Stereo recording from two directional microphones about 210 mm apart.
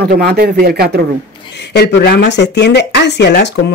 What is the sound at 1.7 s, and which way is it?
Speech, 50° left (ahead or behind).